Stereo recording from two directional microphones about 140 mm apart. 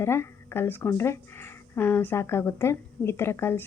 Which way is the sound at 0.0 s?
20° left (ahead or behind).